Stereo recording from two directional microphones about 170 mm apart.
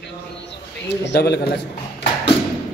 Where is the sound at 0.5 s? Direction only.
90° left.